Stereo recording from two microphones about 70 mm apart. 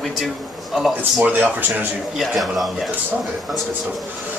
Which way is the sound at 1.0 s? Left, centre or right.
Right.